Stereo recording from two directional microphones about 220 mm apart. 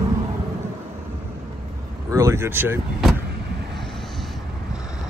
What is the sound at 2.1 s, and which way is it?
Speech, 15° right (ahead or behind).